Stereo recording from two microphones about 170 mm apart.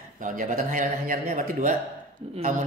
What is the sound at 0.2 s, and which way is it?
Speech, 50° right (ahead or behind).